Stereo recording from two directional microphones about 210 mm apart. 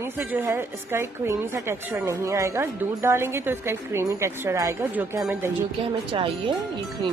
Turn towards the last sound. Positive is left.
turn(degrees=-25)  # may be behind; listen again after turning